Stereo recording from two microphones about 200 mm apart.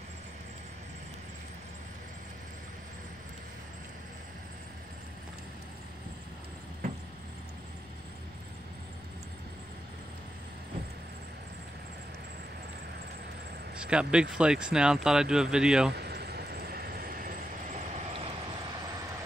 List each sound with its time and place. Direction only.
13.8 s speech: 5° right (ahead or behind)
15.9 s vehicle: 55° right (ahead or behind); by 18.3 s 30° right (ahead or behind)